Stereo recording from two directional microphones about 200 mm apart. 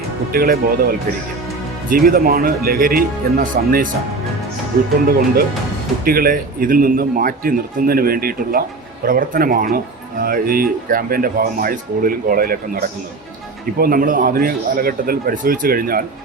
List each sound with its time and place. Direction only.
0.3 s speech: 50° right (ahead or behind)
5.0 s speech: 50° right (ahead or behind)